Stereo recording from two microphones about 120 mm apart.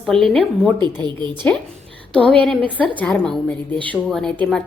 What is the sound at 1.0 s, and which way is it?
Speech, 40° right (ahead or behind).